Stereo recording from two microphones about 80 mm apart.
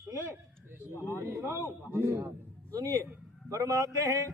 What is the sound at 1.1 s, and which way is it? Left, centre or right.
A man's voice, right.